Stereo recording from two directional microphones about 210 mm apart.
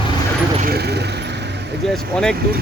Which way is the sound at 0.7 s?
50° right (ahead or behind).